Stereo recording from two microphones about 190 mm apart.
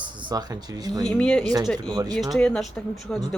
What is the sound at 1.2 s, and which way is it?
Speech, 5° left (ahead or behind).